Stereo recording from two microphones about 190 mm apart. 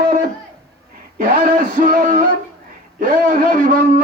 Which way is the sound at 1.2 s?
45° right (ahead or behind).